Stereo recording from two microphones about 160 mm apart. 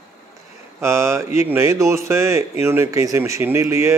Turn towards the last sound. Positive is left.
turn(degrees=-15)  # may be behind; listen again after turning